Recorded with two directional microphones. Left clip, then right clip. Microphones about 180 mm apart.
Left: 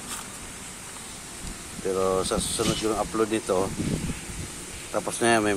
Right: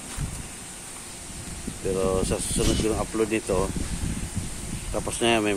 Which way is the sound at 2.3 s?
5° right (ahead or behind).